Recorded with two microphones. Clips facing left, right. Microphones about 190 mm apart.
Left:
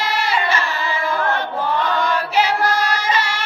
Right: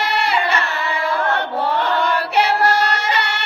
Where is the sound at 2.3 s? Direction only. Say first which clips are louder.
Right 2 dB; 65° right (ahead or behind).